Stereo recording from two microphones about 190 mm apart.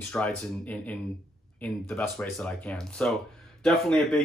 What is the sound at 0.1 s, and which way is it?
Speech, 5° left (ahead or behind).